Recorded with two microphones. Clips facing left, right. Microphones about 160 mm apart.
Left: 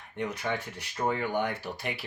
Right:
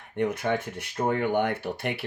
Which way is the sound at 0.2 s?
55° right (ahead or behind).